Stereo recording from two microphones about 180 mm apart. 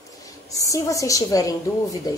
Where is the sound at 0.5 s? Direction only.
20° left (ahead or behind).